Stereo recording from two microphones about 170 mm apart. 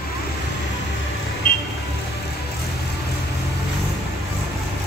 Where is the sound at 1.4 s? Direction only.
50° left (ahead or behind).